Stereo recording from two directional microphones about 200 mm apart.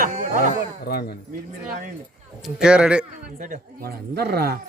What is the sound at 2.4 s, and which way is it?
Speech, 5° right (ahead or behind).